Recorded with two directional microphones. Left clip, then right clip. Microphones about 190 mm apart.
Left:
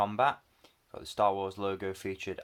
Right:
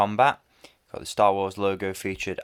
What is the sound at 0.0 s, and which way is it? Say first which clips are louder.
Speech: right 7 dB; 45° right (ahead or behind).